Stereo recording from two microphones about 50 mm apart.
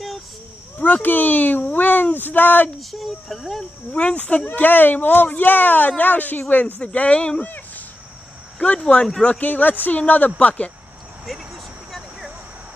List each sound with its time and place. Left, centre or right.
0.7 s speech: left
2.8 s speech: centre
3.9 s speech: left
6.8 s speech: left
7.4 s a sound: left
8.5 s speech: left
9.5 s speech: left
11.2 s vehicle: centre